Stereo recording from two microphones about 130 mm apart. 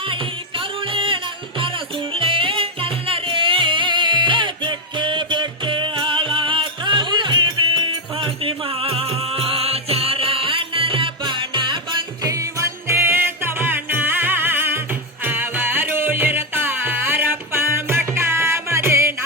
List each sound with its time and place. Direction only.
0.1 s music: 40° right (ahead or behind); by 19.1 s 20° right (ahead or behind)